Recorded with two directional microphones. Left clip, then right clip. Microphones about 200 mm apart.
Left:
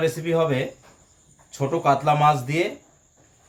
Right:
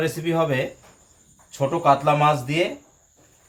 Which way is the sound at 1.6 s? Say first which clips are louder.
Right 2 dB; centre (ahead or behind).